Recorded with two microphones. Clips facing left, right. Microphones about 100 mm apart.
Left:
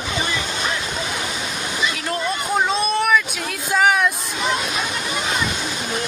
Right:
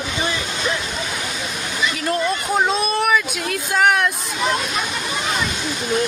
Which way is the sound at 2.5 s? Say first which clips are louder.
Even; 5° right (ahead or behind).